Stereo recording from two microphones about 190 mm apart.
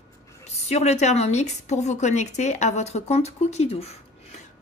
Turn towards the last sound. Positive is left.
turn(degrees=35)  # may be behind; listen again after turning